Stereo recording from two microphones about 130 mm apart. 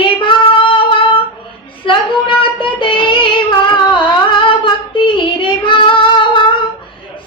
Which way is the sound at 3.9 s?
40° left (ahead or behind).